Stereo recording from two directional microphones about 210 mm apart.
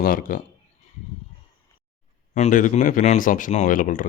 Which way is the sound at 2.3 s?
35° left (ahead or behind).